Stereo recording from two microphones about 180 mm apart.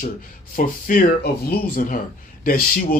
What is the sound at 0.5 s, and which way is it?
Speech, 55° left (ahead or behind).